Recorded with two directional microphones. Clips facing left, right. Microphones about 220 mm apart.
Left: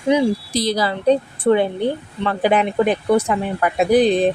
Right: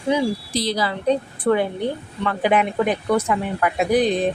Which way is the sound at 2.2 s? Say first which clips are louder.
Left 2 dB; 35° left (ahead or behind).